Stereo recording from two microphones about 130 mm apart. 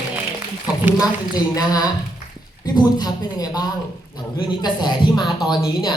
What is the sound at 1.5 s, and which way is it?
Speech, 30° left (ahead or behind).